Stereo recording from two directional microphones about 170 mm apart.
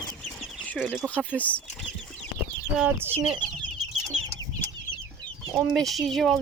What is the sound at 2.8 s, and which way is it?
Speech, 10° right (ahead or behind).